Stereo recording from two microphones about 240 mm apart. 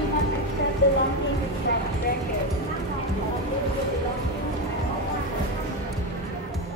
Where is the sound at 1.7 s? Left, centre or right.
Left.